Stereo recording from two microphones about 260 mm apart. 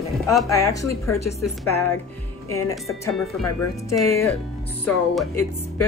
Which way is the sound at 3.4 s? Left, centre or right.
Left.